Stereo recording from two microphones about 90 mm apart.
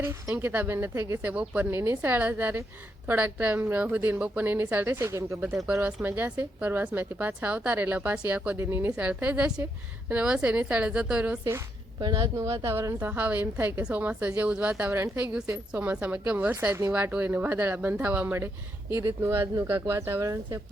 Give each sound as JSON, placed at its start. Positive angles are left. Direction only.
{"t": 0.0, "sound": "a woman's voice", "side_deg": -30}
{"t": 5.6, "sound": "a woman's voice", "side_deg": -15}
{"t": 8.5, "sound": "a woman's voice", "side_deg": -25}
{"t": 9.0, "sound": "a woman's voice", "side_deg": -15}
{"t": 11.9, "sound": "speech", "side_deg": -45}
{"t": 13.1, "sound": "a woman's voice", "side_deg": -15}
{"t": 18.9, "sound": "a woman's voice", "side_deg": -30}